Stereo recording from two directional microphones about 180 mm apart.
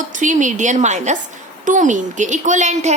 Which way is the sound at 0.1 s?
45° right (ahead or behind).